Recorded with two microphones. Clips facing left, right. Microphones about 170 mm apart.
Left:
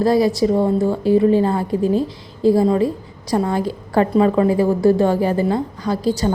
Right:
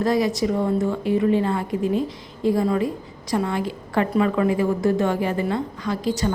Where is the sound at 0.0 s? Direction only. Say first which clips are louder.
Left 5 dB; 35° left (ahead or behind).